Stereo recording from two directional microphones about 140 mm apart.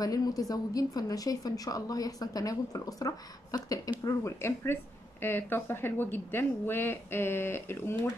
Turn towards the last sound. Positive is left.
turn(degrees=15)  # may be behind; listen again after turning